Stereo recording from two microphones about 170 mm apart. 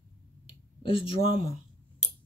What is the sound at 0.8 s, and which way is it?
Speech, 30° left (ahead or behind).